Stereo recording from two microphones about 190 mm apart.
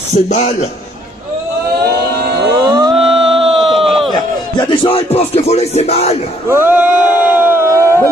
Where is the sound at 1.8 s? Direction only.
60° right (ahead or behind).